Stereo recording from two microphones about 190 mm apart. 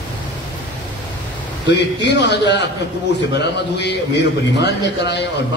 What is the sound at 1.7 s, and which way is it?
A man's voice, 65° left (ahead or behind).